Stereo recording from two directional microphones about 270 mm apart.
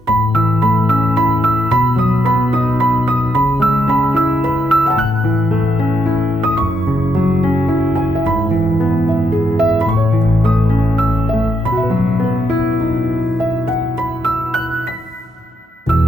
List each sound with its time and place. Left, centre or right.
0.3 s music: centre
3.6 s music: centre
7.3 s music: centre